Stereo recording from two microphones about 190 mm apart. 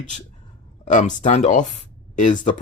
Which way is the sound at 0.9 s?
40° left (ahead or behind).